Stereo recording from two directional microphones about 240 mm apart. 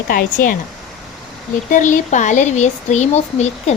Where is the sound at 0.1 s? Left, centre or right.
Left.